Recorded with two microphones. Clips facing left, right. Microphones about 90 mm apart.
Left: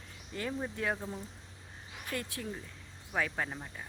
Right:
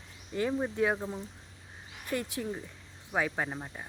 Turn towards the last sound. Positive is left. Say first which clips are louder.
# right 3 dB
turn(degrees=-20)  # may be behind; listen again after turning